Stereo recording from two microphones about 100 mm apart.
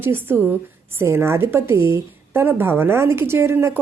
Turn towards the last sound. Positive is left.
turn(degrees=-25)  # may be behind; listen again after turning